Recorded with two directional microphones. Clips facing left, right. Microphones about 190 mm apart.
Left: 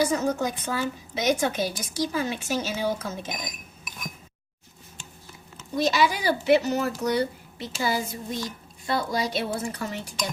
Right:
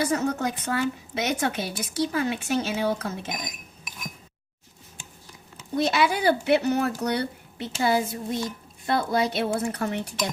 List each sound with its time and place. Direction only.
0.0 s speech: 60° right (ahead or behind)
5.7 s speech: 60° right (ahead or behind)